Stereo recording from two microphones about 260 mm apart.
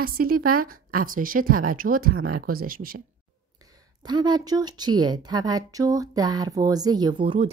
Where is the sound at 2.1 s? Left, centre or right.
Right.